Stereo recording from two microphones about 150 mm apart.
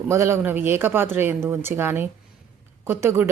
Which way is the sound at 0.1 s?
15° right (ahead or behind).